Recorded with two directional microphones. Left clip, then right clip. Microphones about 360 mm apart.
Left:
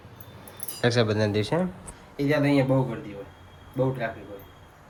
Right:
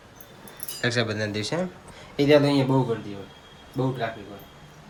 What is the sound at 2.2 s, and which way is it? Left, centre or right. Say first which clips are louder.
Speech: right 6 dB; centre.